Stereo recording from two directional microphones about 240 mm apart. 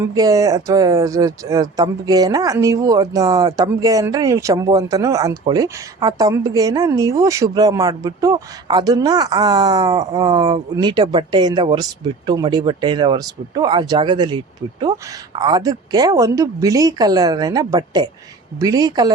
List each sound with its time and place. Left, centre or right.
0.0 s speech: centre